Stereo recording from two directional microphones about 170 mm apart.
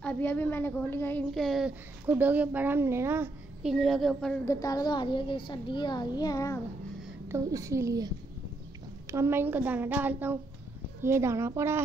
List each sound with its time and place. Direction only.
0.0 s a woman's voice: 10° left (ahead or behind)
1.3 s a woman's voice: centre (ahead or behind)
3.6 s a woman's voice: centre (ahead or behind)
4.5 s a child's voice: 20° left (ahead or behind)
7.2 s a woman's voice: 15° right (ahead or behind)
9.1 s a woman's voice: 15° right (ahead or behind)